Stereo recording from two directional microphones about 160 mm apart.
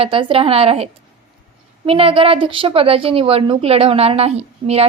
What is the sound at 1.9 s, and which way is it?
A woman's voice, 35° right (ahead or behind).